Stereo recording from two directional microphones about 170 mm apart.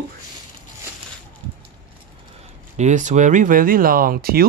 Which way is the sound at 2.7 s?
45° right (ahead or behind).